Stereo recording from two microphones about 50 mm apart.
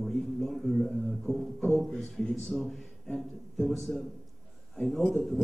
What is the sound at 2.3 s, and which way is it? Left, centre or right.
Speech, centre.